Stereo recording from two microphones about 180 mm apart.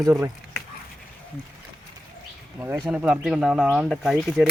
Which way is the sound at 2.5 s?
15° right (ahead or behind).